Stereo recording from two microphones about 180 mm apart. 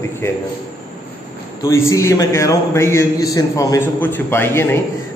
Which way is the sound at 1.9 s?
15° left (ahead or behind).